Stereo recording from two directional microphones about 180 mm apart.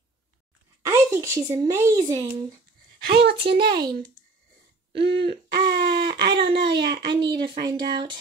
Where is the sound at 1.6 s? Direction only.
15° right (ahead or behind).